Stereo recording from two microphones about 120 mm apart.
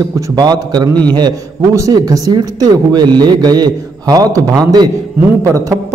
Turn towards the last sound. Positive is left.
turn(degrees=-25)  # may be behind; listen again after turning